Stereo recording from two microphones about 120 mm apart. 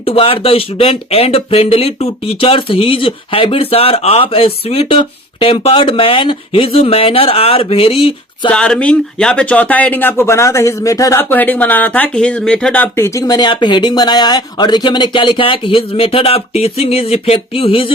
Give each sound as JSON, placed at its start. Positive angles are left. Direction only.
{"t": 0.0, "sound": "speech", "side_deg": 50}
{"t": 8.4, "sound": "speech", "side_deg": 5}
{"t": 11.2, "sound": "speech", "side_deg": 15}
{"t": 13.1, "sound": "speech", "side_deg": 35}